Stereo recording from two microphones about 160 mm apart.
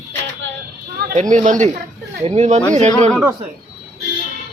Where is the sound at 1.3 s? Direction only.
50° right (ahead or behind).